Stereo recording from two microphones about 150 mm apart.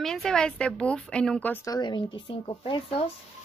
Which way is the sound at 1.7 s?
30° left (ahead or behind).